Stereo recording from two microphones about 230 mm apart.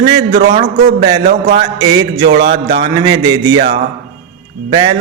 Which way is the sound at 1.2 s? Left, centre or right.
Right.